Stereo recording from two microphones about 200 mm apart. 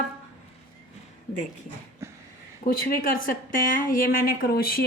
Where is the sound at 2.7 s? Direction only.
45° left (ahead or behind).